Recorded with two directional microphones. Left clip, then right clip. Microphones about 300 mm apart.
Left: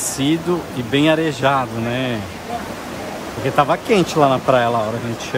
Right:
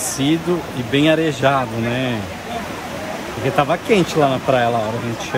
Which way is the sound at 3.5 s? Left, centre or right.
Centre.